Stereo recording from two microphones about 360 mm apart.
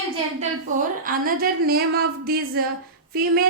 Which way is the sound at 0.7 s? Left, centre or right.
Right.